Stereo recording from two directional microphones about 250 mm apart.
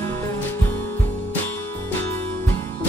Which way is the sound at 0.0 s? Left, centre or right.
Centre.